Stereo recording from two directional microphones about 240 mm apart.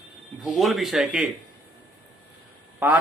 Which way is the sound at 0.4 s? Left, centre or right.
Centre.